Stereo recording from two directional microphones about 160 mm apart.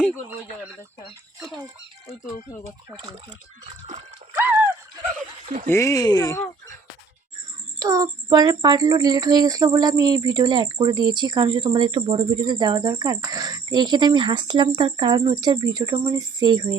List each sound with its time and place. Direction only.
1.4 s speech: 5° right (ahead or behind)
4.4 s a sound: 10° right (ahead or behind)
5.6 s speech: 15° left (ahead or behind)
7.8 s speech: 20° right (ahead or behind)